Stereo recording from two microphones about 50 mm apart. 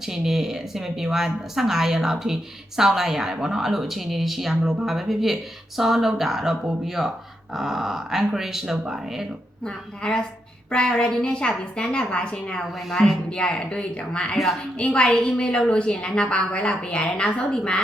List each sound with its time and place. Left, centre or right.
0.0 s speech: centre
9.6 s a woman's voice: centre
12.9 s a woman's voice: centre
13.3 s a woman's voice: centre